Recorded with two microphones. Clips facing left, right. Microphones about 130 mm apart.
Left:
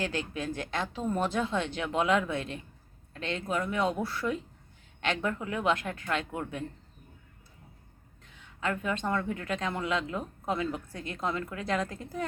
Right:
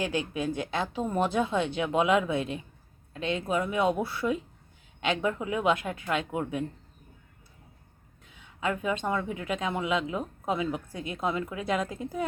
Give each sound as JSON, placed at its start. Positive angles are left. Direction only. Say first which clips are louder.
{"t": 0.0, "sound": "speech", "louder": "right 3 dB", "side_deg": -15}
{"t": 8.4, "sound": "speech", "louder": "right 2 dB", "side_deg": -15}